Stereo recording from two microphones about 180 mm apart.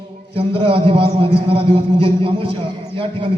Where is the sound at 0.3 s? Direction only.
30° right (ahead or behind).